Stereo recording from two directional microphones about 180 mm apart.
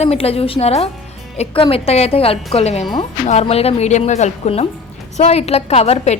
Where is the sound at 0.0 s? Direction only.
35° left (ahead or behind).